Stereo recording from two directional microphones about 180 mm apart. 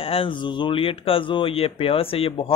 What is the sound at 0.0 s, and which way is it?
Speech, 30° left (ahead or behind).